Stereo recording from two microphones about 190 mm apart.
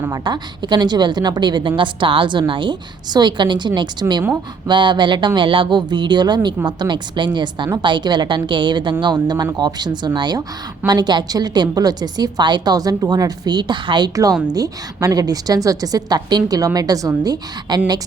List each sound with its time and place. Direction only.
0.0 s a woman's voice: 20° right (ahead or behind)